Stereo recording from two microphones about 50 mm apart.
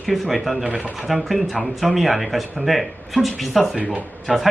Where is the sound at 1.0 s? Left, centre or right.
Centre.